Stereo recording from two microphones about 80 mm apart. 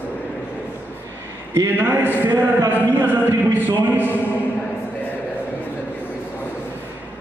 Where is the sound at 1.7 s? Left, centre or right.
Right.